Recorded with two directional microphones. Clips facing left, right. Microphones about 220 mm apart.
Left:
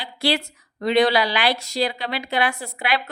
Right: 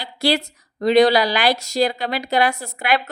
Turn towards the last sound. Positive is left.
turn(degrees=-45)  # may be behind; listen again after turning